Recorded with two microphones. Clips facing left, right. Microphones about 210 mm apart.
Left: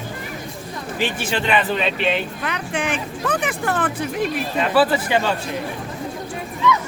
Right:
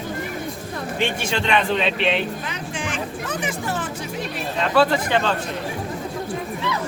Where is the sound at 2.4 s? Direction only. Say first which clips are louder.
Left 5 dB; 60° left (ahead or behind).